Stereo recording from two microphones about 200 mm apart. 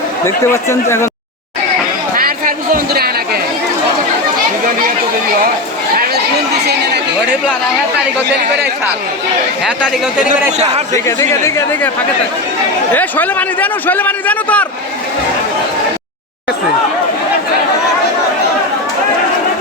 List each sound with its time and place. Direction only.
0.3 s a man's voice: 15° left (ahead or behind)
2.1 s a sound: 45° right (ahead or behind)
6.5 s speech: 55° right (ahead or behind)
9.6 s speech: 5° right (ahead or behind)
10.9 s a man's voice: 15° left (ahead or behind)
12.9 s a man's voice: 10° left (ahead or behind)